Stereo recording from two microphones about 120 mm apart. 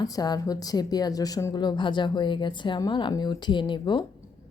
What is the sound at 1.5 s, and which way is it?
Speech, 40° left (ahead or behind).